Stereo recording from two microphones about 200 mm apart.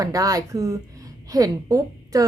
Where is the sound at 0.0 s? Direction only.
15° right (ahead or behind).